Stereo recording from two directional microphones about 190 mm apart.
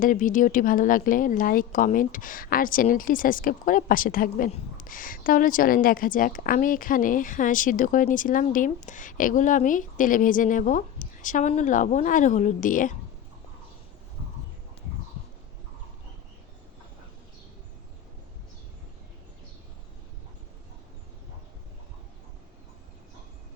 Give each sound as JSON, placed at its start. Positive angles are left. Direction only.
{"t": 0.0, "sound": "a woman's voice", "side_deg": 45}